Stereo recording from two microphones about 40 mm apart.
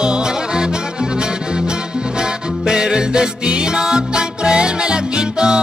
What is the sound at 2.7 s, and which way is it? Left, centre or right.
Music, centre.